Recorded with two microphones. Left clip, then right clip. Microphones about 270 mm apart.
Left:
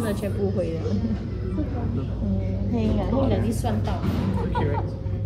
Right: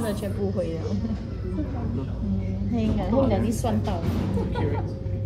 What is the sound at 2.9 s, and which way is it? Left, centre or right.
Speech, right.